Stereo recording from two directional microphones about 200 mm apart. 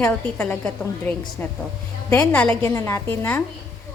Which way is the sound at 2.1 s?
10° left (ahead or behind).